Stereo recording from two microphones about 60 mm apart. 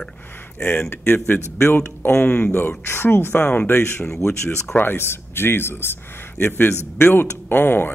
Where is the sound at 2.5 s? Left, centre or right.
Left.